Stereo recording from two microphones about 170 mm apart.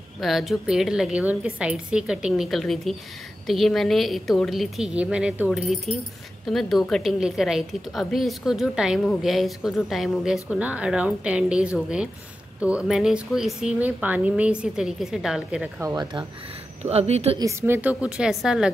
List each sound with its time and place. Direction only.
0.2 s a woman's voice: centre (ahead or behind)
15.8 s speech: 20° right (ahead or behind)
16.8 s a woman's voice: 40° right (ahead or behind)
17.4 s a woman's voice: 15° right (ahead or behind)